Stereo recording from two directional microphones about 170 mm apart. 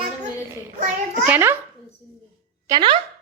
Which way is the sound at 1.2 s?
10° right (ahead or behind).